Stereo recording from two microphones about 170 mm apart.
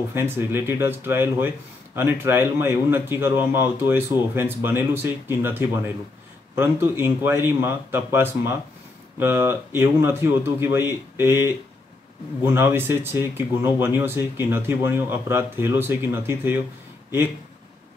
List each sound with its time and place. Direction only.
0.1 s a man's voice: 15° right (ahead or behind)